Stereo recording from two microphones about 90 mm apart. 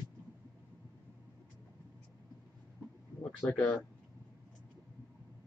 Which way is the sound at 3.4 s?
15° left (ahead or behind).